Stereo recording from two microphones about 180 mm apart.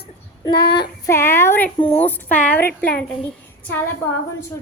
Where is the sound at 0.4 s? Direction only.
25° left (ahead or behind).